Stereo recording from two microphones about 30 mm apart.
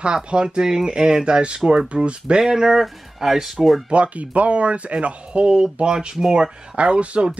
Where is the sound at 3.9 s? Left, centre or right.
Right.